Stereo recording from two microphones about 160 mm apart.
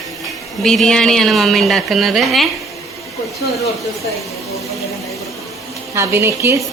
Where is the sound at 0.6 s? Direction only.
5° left (ahead or behind).